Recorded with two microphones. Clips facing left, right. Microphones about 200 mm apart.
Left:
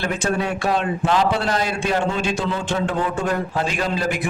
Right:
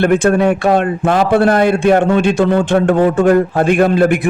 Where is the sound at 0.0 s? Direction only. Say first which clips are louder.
Right 11 dB; 60° right (ahead or behind).